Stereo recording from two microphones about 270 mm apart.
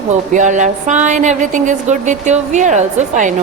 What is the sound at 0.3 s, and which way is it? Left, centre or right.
A woman's voice, right.